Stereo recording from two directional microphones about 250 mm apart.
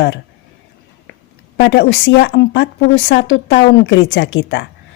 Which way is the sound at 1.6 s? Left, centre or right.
Left.